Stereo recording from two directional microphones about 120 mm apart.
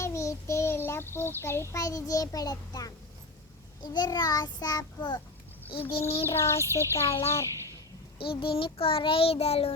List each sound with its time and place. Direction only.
0.0 s child singing: 25° left (ahead or behind)
5.9 s child singing: 55° left (ahead or behind)
6.2 s a child's voice: 20° left (ahead or behind)
8.2 s child singing: 50° left (ahead or behind)